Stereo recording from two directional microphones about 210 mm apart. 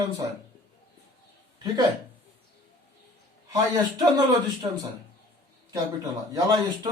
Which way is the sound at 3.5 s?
15° right (ahead or behind).